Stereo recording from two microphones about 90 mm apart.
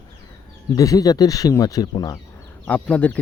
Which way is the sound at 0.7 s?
40° left (ahead or behind).